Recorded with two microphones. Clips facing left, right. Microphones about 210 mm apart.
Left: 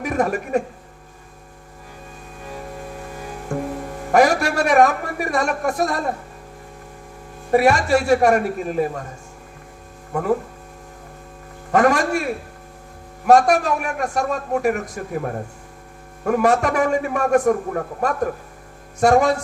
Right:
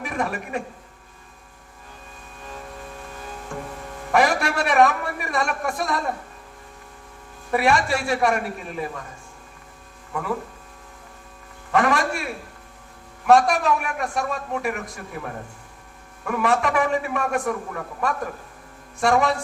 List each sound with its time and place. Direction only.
0.0 s a man's voice: 45° left (ahead or behind)
3.5 s music: 45° left (ahead or behind)
4.1 s a man's voice: 45° left (ahead or behind)
7.5 s a man's voice: 45° left (ahead or behind)
10.1 s speech: 45° left (ahead or behind)
11.7 s a man's voice: 45° left (ahead or behind)